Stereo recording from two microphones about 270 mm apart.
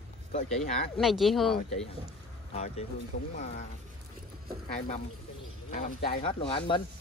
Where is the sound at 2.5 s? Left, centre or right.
Left.